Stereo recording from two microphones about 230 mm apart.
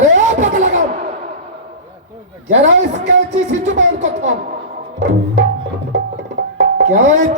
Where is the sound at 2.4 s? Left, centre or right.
Right.